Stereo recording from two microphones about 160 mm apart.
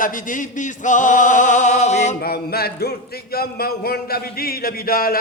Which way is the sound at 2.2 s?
75° left (ahead or behind).